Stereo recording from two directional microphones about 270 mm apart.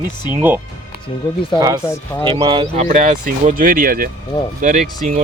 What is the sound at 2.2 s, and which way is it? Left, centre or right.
Speech, centre.